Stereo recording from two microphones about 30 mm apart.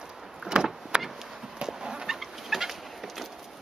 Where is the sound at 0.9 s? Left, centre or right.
Right.